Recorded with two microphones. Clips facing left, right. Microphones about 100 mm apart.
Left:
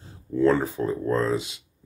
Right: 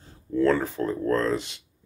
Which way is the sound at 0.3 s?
15° left (ahead or behind).